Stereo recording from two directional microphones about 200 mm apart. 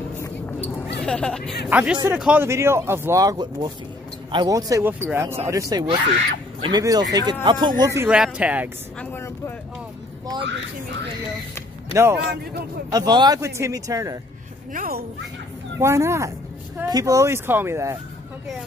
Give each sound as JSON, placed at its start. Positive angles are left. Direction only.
{"t": 0.9, "sound": "speech", "side_deg": 5}
{"t": 1.7, "sound": "speech", "side_deg": -5}
{"t": 9.0, "sound": "speech", "side_deg": 10}
{"t": 11.9, "sound": "a man's voice", "side_deg": -15}
{"t": 14.7, "sound": "speech", "side_deg": -45}
{"t": 15.8, "sound": "speech", "side_deg": -15}